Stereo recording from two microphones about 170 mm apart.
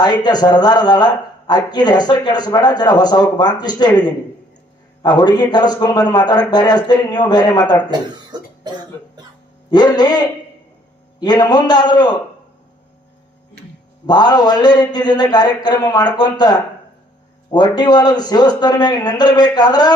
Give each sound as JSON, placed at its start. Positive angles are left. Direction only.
{"t": 0.0, "sound": "a man's voice", "side_deg": 25}
{"t": 7.9, "sound": "speech", "side_deg": -25}
{"t": 9.6, "sound": "a man's voice", "side_deg": 25}
{"t": 14.1, "sound": "a man's voice", "side_deg": 25}